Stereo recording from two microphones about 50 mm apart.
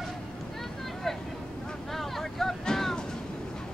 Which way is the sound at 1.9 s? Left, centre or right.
Centre.